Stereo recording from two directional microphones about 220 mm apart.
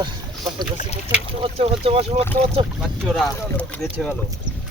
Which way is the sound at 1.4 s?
25° right (ahead or behind).